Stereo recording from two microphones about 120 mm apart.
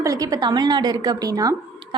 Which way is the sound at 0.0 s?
30° right (ahead or behind).